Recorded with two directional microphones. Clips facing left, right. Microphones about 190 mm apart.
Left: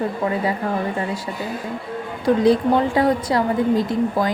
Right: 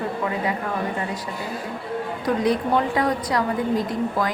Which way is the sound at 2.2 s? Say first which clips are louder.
Left 6 dB; 30° left (ahead or behind).